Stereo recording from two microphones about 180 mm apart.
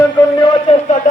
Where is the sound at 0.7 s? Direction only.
40° left (ahead or behind).